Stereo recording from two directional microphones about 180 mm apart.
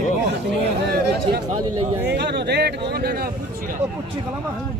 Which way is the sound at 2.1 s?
70° right (ahead or behind).